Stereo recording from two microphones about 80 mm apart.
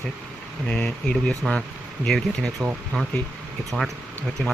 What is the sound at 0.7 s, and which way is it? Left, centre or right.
Speech, centre.